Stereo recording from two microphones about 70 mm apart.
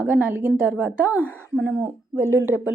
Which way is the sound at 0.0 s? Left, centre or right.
Right.